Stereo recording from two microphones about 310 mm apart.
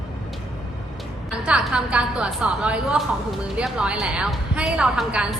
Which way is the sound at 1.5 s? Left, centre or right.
Centre.